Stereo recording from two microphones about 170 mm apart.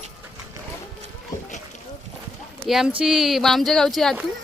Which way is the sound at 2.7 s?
5° right (ahead or behind).